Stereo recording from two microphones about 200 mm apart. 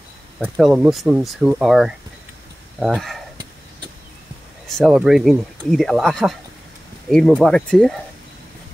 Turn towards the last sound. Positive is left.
turn(degrees=5)  # may be behind; listen again after turning